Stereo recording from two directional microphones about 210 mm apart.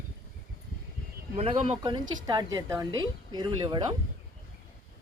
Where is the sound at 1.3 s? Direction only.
30° right (ahead or behind).